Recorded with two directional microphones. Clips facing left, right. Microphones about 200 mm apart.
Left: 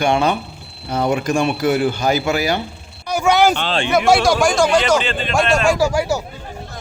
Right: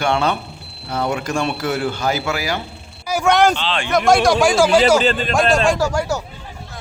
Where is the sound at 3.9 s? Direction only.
5° left (ahead or behind).